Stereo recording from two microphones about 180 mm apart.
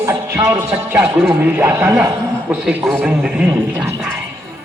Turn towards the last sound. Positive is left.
turn(degrees=-5)  # may be behind; listen again after turning